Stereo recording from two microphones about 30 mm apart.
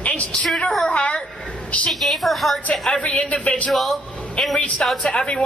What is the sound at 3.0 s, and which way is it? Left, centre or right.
Speech, left.